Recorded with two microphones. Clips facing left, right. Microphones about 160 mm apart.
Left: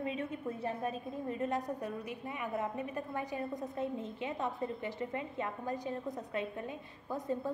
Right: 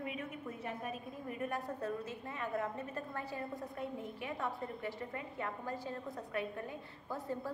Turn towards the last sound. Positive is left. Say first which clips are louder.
# left 4 dB
turn(degrees=20)  # may be behind; listen again after turning